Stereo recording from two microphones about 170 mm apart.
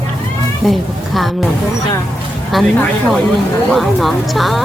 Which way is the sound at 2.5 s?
Centre (ahead or behind).